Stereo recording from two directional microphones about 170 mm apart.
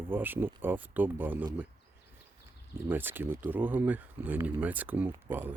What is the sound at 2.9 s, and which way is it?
Speech, 10° right (ahead or behind).